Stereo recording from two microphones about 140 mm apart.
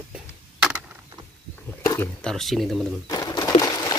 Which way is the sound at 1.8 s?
25° left (ahead or behind).